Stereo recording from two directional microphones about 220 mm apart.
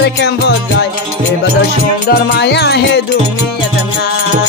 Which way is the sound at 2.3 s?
50° left (ahead or behind).